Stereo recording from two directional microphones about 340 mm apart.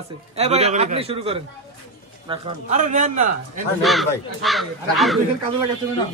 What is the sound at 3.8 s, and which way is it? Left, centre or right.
Speech, centre.